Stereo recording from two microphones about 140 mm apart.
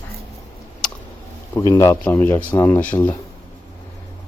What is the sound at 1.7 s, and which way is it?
Speech, 20° left (ahead or behind).